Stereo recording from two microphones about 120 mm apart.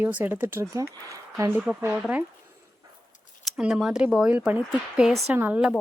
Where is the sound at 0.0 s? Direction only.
15° right (ahead or behind).